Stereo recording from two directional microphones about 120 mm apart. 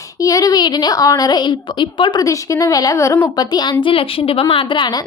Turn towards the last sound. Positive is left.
turn(degrees=50)  # may be behind; listen again after turning